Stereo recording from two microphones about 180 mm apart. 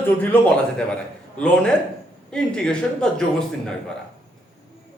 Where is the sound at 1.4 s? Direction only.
5° left (ahead or behind).